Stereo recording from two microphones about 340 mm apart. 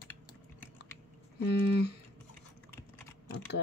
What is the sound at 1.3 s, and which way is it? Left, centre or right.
Speech, left.